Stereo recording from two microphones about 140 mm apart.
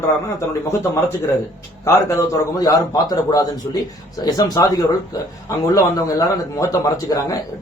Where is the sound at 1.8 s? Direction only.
20° left (ahead or behind).